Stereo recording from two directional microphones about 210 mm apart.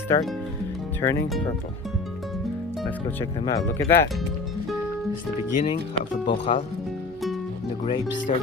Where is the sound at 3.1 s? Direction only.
10° left (ahead or behind).